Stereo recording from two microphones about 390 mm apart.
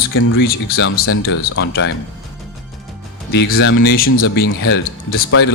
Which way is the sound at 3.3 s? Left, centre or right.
Left.